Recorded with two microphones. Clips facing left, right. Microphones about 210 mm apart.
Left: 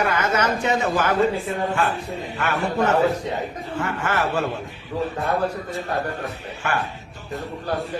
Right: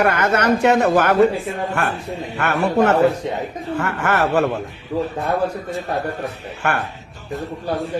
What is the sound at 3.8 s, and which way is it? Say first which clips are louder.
Speech: right 4 dB; 65° right (ahead or behind).